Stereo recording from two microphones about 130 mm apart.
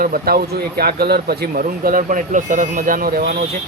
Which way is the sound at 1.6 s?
85° right.